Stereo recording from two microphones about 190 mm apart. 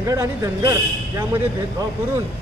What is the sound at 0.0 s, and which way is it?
Speech, 15° right (ahead or behind).